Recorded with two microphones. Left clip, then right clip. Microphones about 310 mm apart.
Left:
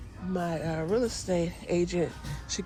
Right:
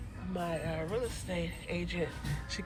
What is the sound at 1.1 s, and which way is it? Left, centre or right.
Speech, centre.